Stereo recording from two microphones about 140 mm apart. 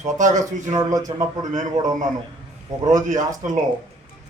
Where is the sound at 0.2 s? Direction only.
60° right (ahead or behind).